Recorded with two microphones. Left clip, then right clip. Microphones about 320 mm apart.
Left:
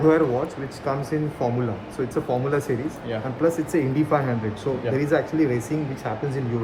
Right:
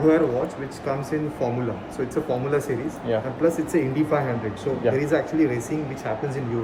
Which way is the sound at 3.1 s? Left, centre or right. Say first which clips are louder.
Right 7 dB; centre.